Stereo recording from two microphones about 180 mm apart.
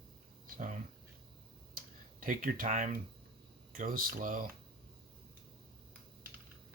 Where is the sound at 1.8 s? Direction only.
50° right (ahead or behind).